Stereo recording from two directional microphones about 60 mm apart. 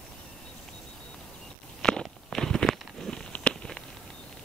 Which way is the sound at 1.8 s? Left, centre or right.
Centre.